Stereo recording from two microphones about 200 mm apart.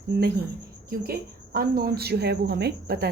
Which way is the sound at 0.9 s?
50° right (ahead or behind).